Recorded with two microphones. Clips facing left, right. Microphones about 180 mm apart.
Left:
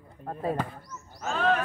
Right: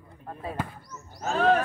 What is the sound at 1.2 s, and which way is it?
Speech, 40° right (ahead or behind).